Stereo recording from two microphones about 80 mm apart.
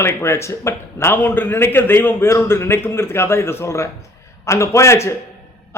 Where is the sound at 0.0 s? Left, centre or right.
Left.